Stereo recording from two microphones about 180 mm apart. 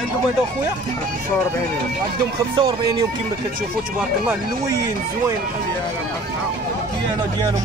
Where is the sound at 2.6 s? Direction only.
25° right (ahead or behind).